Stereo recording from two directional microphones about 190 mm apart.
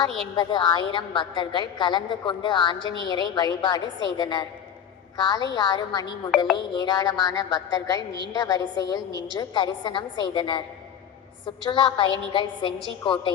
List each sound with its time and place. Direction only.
0.3 s a woman's voice: 25° left (ahead or behind)